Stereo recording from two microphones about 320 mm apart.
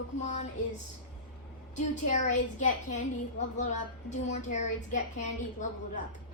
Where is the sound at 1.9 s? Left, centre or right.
Left.